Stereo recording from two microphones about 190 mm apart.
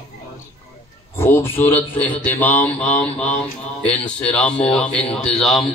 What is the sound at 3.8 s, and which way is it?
Speech, 5° left (ahead or behind).